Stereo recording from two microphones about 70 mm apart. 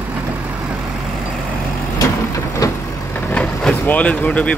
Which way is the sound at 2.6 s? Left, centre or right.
Left.